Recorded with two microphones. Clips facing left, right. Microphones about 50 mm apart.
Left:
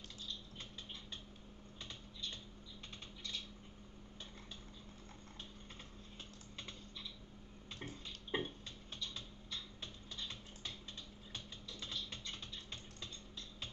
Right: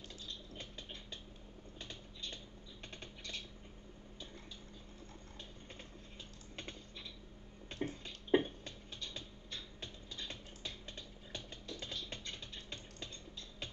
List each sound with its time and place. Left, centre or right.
1.8 s typing: right
6.5 s typing: right
7.8 s a sound: right
11.3 s music: right